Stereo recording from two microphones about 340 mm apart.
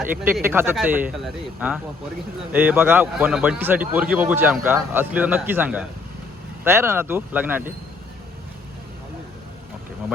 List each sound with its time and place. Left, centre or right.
0.0 s a man's voice: centre